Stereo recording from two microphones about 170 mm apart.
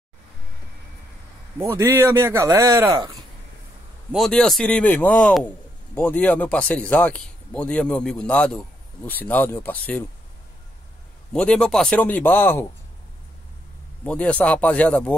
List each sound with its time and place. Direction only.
1.6 s speech: 15° right (ahead or behind)
4.1 s speech: centre (ahead or behind)
11.3 s speech: 5° left (ahead or behind)
14.0 s speech: 5° left (ahead or behind)